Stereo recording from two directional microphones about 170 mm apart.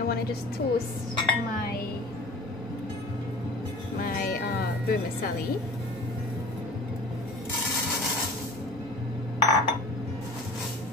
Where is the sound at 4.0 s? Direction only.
60° left (ahead or behind).